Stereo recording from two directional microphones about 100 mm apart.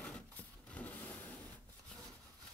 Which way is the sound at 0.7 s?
15° left (ahead or behind).